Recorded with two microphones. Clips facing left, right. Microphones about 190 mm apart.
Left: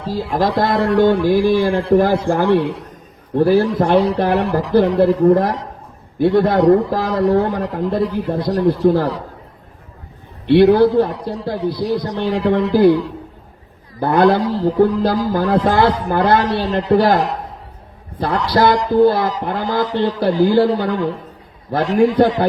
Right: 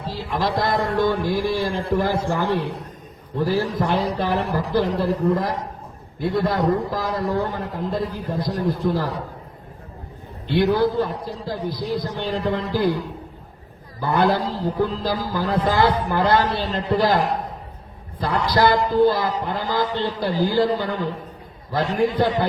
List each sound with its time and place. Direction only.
0.0 s speech: 45° left (ahead or behind)
0.5 s a man's voice: 90° left
8.9 s a man's voice: 80° left
10.4 s a man's voice: 80° left
14.0 s a man's voice: 90° left
18.7 s a man's voice: 80° left
21.7 s a man's voice: 75° left (ahead or behind)